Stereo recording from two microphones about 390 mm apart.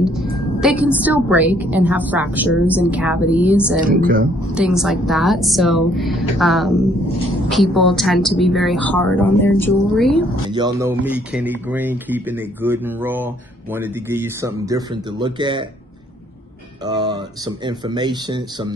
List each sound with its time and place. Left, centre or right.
0.0 s a woman's voice: centre
3.8 s speech: right
4.6 s a woman's voice: centre
10.5 s a woman's voice: centre
16.8 s speech: centre